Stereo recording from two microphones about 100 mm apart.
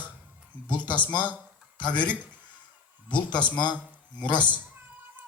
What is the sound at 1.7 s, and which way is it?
Speech, 50° left (ahead or behind).